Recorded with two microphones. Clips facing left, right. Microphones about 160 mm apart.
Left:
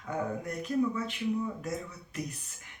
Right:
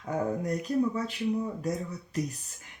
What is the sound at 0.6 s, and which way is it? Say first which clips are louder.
Speech: left 2 dB; 35° right (ahead or behind).